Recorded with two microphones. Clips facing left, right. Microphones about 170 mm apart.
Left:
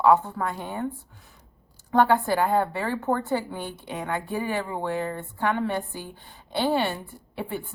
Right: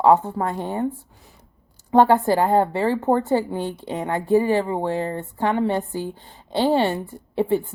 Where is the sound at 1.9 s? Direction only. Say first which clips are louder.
Right 5 dB; 25° right (ahead or behind).